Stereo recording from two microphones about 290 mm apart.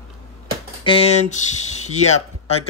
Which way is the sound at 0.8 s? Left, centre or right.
Centre.